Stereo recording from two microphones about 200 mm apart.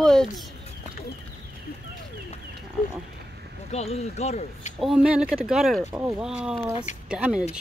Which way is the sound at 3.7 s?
30° left (ahead or behind).